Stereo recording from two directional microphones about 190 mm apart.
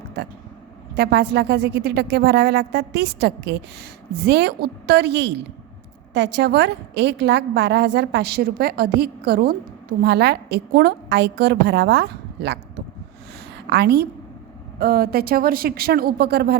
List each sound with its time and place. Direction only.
0.9 s a woman's voice: 55° right (ahead or behind)
13.7 s a woman's voice: 60° right (ahead or behind)